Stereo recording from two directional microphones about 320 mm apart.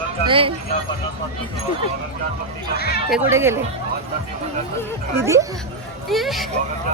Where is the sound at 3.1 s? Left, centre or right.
Centre.